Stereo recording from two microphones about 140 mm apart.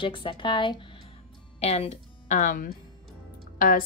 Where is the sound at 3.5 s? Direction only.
75° left (ahead or behind).